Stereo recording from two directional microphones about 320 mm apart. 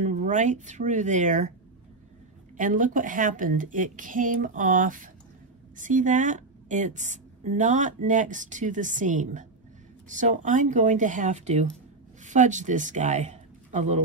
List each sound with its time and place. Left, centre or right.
0.0 s a woman's voice: right
2.5 s a woman's voice: right